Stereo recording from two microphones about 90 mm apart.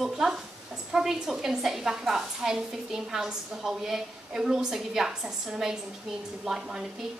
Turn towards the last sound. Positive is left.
turn(degrees=-10)  # may be behind; listen again after turning